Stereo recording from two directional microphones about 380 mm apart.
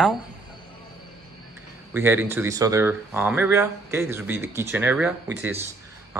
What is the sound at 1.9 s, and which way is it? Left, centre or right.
Speech, centre.